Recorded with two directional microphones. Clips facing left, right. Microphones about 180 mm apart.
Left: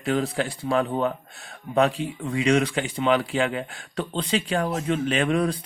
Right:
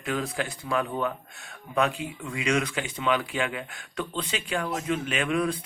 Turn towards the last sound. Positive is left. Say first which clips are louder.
# left 4 dB
turn(degrees=35)  # may be behind; listen again after turning